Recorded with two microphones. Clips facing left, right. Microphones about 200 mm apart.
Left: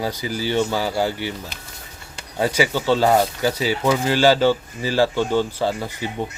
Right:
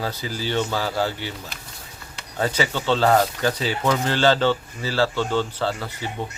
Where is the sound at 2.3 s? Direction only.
10° left (ahead or behind).